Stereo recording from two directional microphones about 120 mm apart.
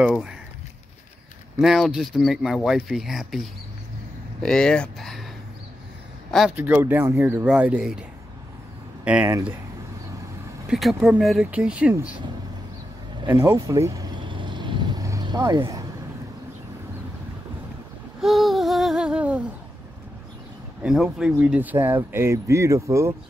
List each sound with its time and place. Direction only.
0.1 s speech: 5° right (ahead or behind)
1.6 s speech: centre (ahead or behind)
6.5 s speech: 15° right (ahead or behind)
9.0 s speech: 10° right (ahead or behind)
10.7 s speech: centre (ahead or behind)
13.5 s speech: 30° right (ahead or behind)
14.2 s vehicle: 40° right (ahead or behind)
18.2 s humming: centre (ahead or behind)
20.8 s speech: 5° right (ahead or behind); by 23.1 s 25° right (ahead or behind)